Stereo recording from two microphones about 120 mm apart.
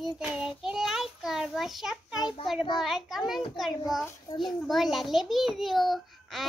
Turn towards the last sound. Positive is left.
turn(degrees=0)  # may be behind; listen again after turning